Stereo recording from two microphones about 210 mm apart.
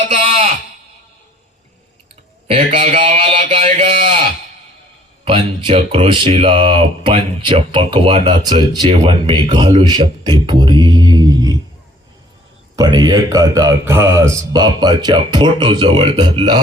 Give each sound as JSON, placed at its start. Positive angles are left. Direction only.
{"t": 0.1, "sound": "a sound", "side_deg": -30}
{"t": 2.5, "sound": "a man's voice", "side_deg": -35}
{"t": 2.9, "sound": "a sound", "side_deg": -30}
{"t": 5.2, "sound": "speech", "side_deg": -25}
{"t": 10.4, "sound": "mantra", "side_deg": -20}
{"t": 12.7, "sound": "speech", "side_deg": -20}